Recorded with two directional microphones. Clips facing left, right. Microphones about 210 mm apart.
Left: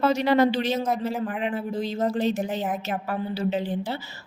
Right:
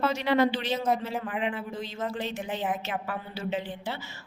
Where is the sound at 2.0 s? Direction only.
40° left (ahead or behind).